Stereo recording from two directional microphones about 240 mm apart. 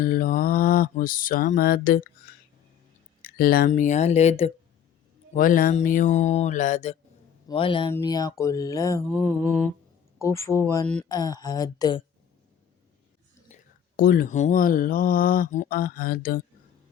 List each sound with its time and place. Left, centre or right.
0.0 s speech: left
3.2 s speech: left
7.9 s mantra: centre
13.5 s speech: left